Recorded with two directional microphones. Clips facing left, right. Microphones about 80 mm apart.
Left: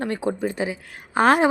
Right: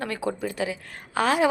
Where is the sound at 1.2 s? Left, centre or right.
Left.